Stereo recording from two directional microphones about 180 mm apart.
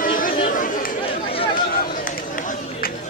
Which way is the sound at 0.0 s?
50° left (ahead or behind).